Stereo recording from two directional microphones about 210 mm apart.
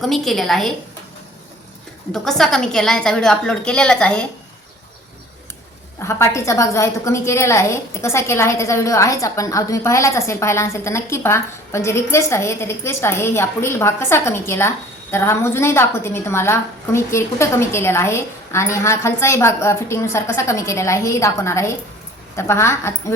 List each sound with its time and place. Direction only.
0.0 s a woman's voice: centre (ahead or behind)
2.1 s a woman's voice: centre (ahead or behind)
6.0 s a woman's voice: 15° left (ahead or behind)